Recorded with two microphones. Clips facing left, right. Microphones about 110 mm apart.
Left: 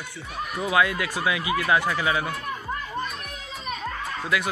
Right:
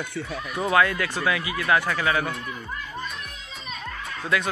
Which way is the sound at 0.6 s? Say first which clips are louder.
Right 2 dB; 10° left (ahead or behind).